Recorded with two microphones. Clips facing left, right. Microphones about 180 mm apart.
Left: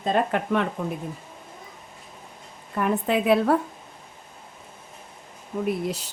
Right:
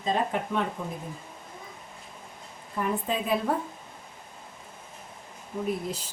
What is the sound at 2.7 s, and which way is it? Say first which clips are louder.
Speech: left 6 dB; 70° left (ahead or behind).